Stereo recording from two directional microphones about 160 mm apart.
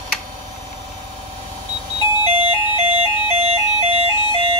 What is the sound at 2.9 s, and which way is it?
Ice cream truck, 40° right (ahead or behind).